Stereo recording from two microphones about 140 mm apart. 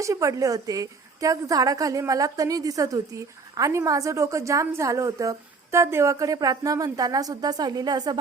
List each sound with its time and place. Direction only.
0.0 s a woman's voice: 25° right (ahead or behind)